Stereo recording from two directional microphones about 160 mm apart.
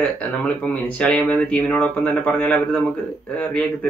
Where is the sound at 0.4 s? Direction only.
10° left (ahead or behind).